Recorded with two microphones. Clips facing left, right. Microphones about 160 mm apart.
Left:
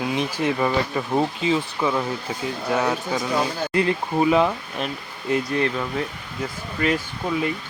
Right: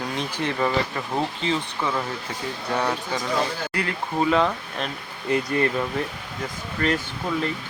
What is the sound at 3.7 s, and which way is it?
Speech, 20° left (ahead or behind).